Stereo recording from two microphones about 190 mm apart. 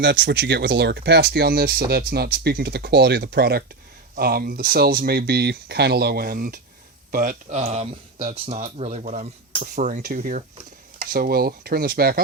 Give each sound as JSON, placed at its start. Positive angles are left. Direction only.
{"t": 0.0, "sound": "speech", "side_deg": -65}
{"t": 7.6, "sound": "speech", "side_deg": -35}